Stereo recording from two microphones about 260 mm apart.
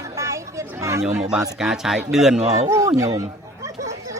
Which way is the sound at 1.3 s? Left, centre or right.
Centre.